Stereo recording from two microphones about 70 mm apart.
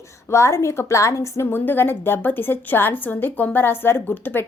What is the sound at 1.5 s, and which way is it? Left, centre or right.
Speech, left.